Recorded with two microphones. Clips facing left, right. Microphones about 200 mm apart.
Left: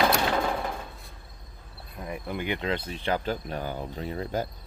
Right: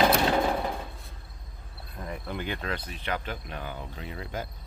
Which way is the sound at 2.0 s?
10° left (ahead or behind).